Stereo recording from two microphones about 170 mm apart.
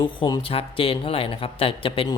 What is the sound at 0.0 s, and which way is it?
A woman's voice, 25° left (ahead or behind).